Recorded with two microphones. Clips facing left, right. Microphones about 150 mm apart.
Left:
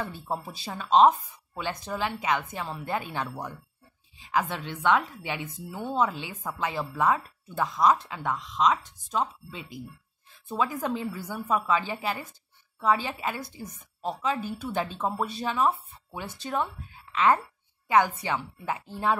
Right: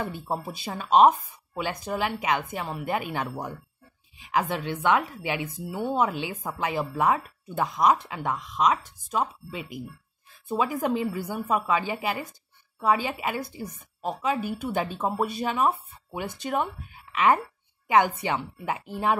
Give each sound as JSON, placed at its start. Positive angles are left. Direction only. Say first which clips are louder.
{"t": 0.0, "sound": "a woman's voice", "louder": "right 2 dB", "side_deg": -15}
{"t": 4.8, "sound": "a woman's voice", "louder": "even", "side_deg": -10}